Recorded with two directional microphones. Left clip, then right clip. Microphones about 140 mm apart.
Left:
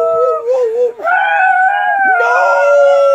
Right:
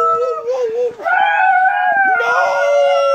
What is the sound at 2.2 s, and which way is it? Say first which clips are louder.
Howl: left 4 dB; 30° left (ahead or behind).